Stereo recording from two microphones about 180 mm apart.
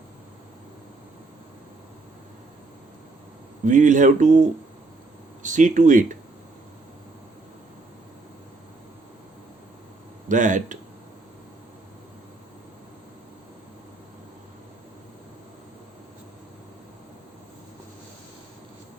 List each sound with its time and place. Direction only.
3.7 s speech: 45° right (ahead or behind)
10.2 s speech: 45° right (ahead or behind)